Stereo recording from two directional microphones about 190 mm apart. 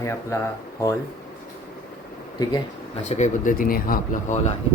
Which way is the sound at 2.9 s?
35° left (ahead or behind).